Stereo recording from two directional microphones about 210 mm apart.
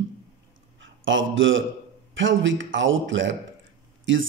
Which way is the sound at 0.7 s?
65° right (ahead or behind).